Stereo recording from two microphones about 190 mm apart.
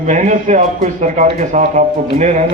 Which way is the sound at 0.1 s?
40° right (ahead or behind).